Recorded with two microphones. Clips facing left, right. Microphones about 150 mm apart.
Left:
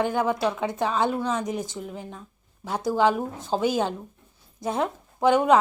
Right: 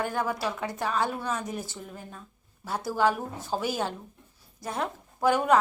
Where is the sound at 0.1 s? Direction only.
20° left (ahead or behind).